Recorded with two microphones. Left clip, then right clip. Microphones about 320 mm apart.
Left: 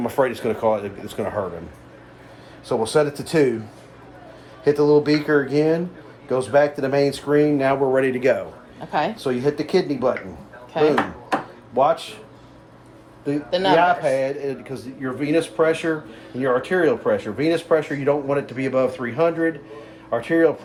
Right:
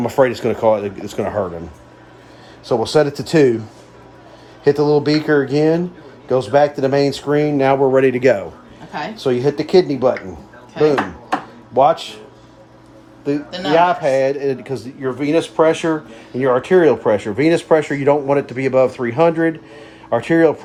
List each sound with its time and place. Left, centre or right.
0.0 s speech: right
2.6 s speech: right
4.6 s speech: right
10.8 s speech: centre
11.7 s speech: right
13.5 s speech: centre
13.7 s speech: right